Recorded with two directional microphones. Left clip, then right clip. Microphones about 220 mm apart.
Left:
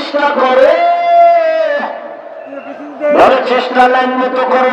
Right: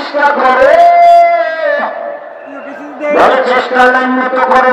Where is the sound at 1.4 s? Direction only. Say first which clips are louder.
Left 1 dB; 30° left (ahead or behind).